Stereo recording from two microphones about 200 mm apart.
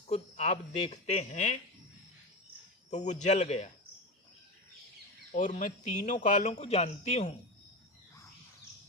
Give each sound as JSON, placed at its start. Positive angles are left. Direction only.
{"t": 0.1, "sound": "speech", "side_deg": 35}
{"t": 2.9, "sound": "speech", "side_deg": 35}
{"t": 5.3, "sound": "speech", "side_deg": 40}